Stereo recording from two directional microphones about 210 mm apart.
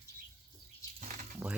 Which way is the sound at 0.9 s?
35° right (ahead or behind).